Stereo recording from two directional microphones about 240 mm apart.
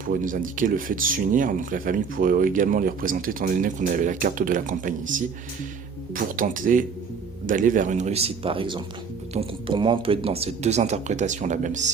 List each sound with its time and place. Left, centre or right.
0.1 s speech: right